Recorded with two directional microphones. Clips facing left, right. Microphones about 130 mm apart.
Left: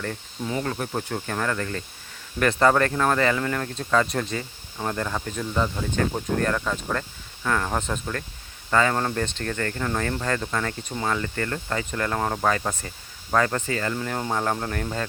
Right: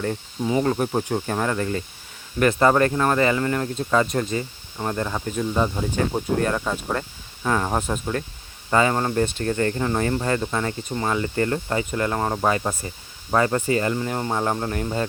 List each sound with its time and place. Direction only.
0.0 s speech: 20° right (ahead or behind)
10.8 s speech: centre (ahead or behind)
11.1 s speech: 20° right (ahead or behind)
13.9 s speech: 10° right (ahead or behind)